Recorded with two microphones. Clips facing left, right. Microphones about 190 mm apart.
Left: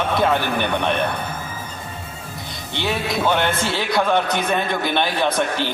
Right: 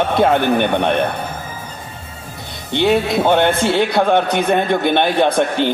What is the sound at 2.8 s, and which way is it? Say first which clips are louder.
Speech: right 7 dB; 60° right (ahead or behind).